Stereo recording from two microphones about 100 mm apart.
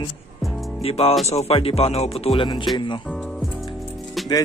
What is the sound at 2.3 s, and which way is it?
Speech, 50° left (ahead or behind).